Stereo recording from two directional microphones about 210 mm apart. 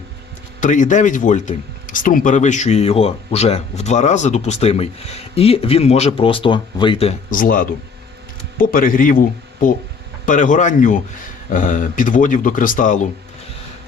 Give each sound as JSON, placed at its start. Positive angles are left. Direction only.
{"t": 0.6, "sound": "speech", "side_deg": 35}